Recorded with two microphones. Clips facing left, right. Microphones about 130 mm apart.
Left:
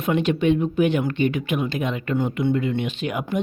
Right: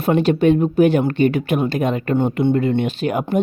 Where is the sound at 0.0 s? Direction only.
35° right (ahead or behind).